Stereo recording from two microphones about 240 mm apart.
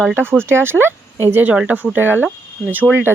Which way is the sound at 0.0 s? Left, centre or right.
Centre.